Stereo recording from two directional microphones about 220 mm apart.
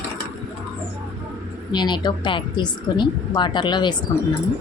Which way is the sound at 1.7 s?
20° left (ahead or behind).